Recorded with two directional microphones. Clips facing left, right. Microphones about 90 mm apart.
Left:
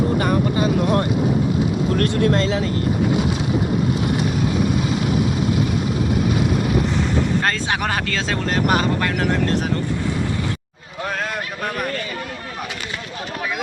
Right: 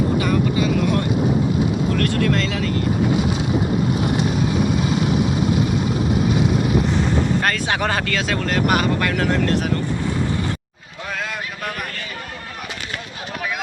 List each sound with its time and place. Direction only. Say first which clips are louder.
0.2 s vehicle: even; 40° left (ahead or behind)
2.0 s speech: left 3 dB; 35° left (ahead or behind)
7.4 s speech: even; 20° left (ahead or behind)
7.8 s speech: right 1 dB; 10° left (ahead or behind)
8.1 s speech: right 1 dB; 25° left (ahead or behind)